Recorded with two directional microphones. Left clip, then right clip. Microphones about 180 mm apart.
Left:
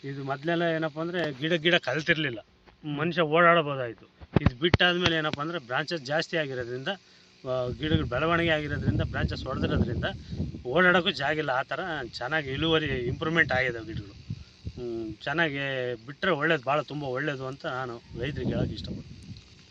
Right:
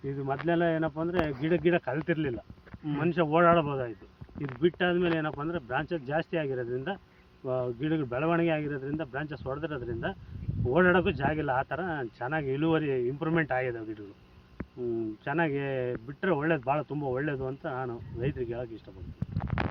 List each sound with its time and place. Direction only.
0.2 s speech: 25° left (ahead or behind)
15.2 s speech: 30° left (ahead or behind)